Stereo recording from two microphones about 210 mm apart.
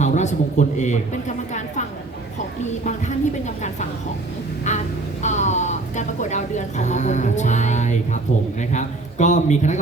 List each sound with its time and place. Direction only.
0.0 s a man's voice: 35° left (ahead or behind)
3.4 s a woman's voice: 35° left (ahead or behind)
4.7 s a sound: 35° left (ahead or behind)
5.2 s a woman's voice: 35° left (ahead or behind)